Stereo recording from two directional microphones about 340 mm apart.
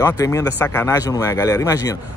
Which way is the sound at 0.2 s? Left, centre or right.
Centre.